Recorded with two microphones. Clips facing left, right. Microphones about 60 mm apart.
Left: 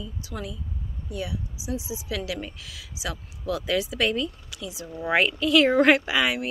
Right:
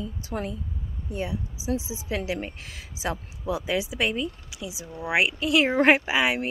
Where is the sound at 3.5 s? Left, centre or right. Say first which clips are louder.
Left 1 dB; centre.